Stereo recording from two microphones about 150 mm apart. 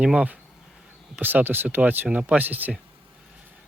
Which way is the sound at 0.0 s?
5° right (ahead or behind).